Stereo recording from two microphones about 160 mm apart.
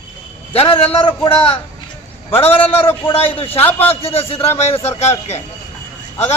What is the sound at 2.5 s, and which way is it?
Speech, 10° left (ahead or behind).